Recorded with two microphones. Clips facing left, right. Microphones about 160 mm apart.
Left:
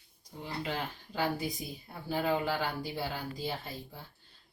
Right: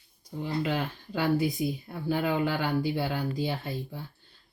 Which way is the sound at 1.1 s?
65° right (ahead or behind).